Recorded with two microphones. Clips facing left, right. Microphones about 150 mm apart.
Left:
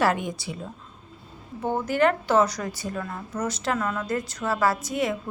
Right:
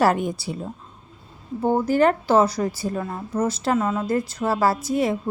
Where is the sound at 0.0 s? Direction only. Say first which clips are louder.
Right 4 dB; 40° right (ahead or behind).